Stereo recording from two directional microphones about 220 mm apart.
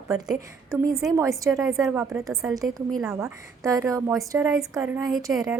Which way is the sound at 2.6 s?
Centre (ahead or behind).